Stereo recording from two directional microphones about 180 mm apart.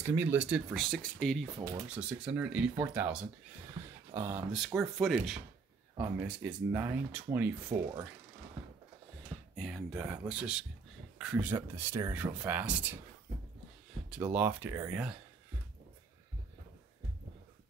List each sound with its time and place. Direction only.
0.0 s speech: 15° right (ahead or behind)
4.5 s speech: 5° right (ahead or behind)
9.6 s speech: centre (ahead or behind)
14.1 s speech: 10° right (ahead or behind)